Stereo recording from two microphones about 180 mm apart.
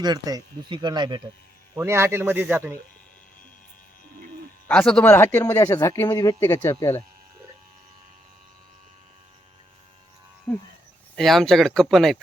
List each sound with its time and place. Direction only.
0.0 s speech: 20° right (ahead or behind)
1.7 s speech: 15° right (ahead or behind)
4.7 s speech: 5° left (ahead or behind)
10.5 s speech: 5° left (ahead or behind)